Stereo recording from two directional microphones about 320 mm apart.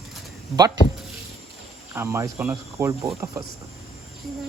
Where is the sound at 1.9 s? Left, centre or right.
Centre.